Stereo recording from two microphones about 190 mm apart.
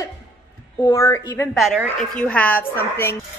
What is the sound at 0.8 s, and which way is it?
Speech, 15° left (ahead or behind).